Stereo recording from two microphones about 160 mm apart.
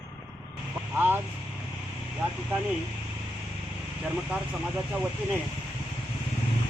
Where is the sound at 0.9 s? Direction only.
10° right (ahead or behind).